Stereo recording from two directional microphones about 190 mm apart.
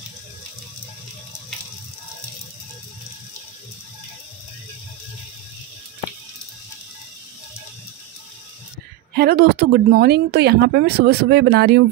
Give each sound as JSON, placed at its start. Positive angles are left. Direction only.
{"t": 9.1, "sound": "a woman's voice", "side_deg": -55}